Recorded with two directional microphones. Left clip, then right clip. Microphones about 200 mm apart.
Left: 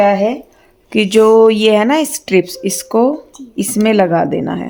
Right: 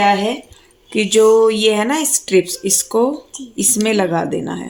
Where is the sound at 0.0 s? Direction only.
45° left (ahead or behind).